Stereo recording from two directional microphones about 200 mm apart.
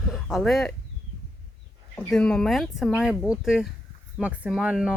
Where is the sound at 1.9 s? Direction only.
5° left (ahead or behind).